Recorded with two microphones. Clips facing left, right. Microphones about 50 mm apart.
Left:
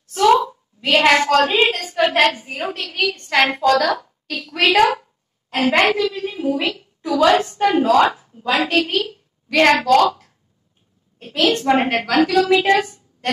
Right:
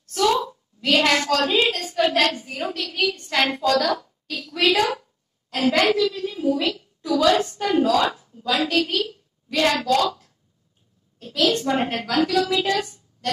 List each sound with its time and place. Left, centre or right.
0.0 s a sound: left
0.5 s a woman's voice: left
2.9 s a woman's voice: left
4.3 s a woman's voice: left